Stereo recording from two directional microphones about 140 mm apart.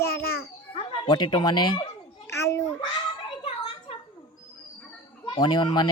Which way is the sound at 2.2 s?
20° left (ahead or behind).